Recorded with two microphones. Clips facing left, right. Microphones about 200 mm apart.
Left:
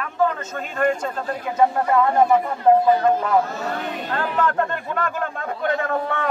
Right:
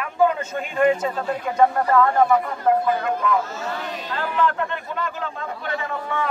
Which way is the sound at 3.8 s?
50° left (ahead or behind).